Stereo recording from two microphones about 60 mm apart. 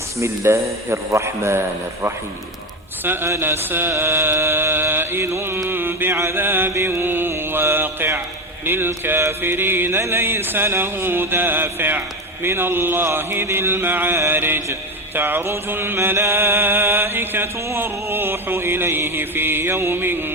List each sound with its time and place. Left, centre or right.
0.4 s a man's voice: right
3.0 s music: right
5.6 s a sound: right
6.1 s music: right
6.7 s mantra: right
8.6 s music: right